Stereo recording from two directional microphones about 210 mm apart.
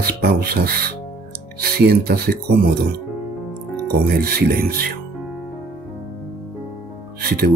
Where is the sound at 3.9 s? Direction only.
45° right (ahead or behind).